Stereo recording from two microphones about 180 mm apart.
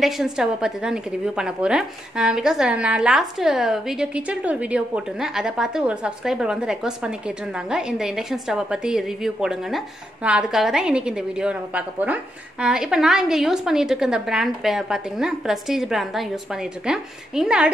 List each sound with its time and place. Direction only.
0.0 s a woman's voice: 5° right (ahead or behind)